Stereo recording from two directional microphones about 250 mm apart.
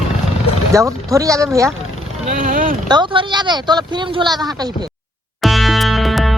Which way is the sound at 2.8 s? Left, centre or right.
Centre.